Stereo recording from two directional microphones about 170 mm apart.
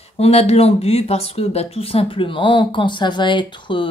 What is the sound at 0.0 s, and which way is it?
Speech, 40° left (ahead or behind).